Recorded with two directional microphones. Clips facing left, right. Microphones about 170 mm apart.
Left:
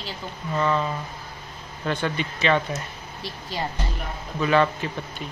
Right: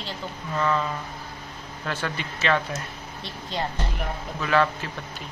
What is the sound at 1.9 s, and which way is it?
A woman's voice, 5° right (ahead or behind).